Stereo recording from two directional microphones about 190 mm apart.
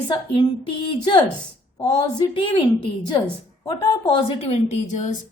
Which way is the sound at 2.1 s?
25° left (ahead or behind).